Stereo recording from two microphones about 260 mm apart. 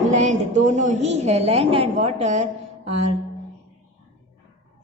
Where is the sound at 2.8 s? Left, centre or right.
Right.